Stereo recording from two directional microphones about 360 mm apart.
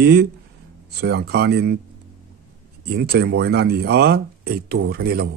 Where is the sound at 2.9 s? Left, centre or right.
Right.